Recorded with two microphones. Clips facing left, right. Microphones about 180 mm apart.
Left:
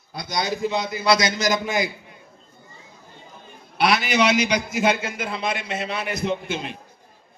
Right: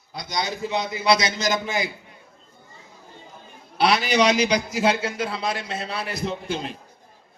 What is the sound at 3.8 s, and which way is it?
A man's voice, 35° right (ahead or behind).